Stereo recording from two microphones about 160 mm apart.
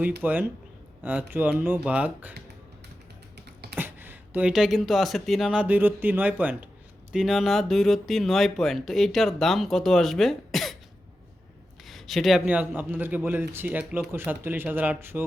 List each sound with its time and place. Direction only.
0.2 s speech: 10° right (ahead or behind)
3.3 s beatboxing: 90° right
3.8 s speech: 10° right (ahead or behind)
11.9 s speech: centre (ahead or behind)